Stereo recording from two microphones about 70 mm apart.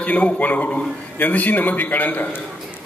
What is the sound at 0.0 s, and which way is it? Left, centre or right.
A man's voice, left.